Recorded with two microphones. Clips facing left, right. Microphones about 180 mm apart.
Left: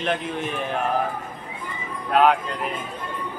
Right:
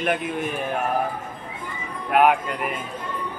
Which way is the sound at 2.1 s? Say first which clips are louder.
Even; 15° right (ahead or behind).